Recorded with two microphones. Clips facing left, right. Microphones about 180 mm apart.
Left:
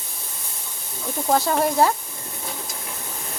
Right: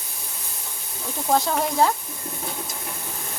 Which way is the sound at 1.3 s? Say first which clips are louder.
Left 2 dB; 5° left (ahead or behind).